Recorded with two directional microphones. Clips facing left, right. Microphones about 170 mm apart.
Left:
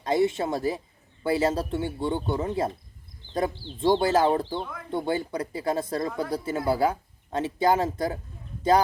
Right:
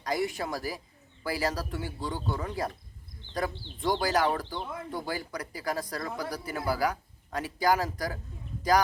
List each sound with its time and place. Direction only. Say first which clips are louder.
0.0 s speech: left 7 dB; 25° left (ahead or behind)
3.8 s speech: left 6 dB; 25° left (ahead or behind)